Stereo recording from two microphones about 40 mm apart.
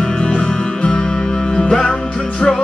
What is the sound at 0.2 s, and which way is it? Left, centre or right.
Music, left.